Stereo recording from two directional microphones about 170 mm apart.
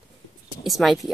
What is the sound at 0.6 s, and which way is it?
Speech, centre (ahead or behind).